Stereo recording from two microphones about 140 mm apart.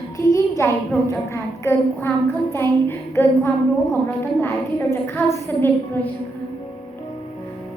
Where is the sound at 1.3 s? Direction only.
20° left (ahead or behind).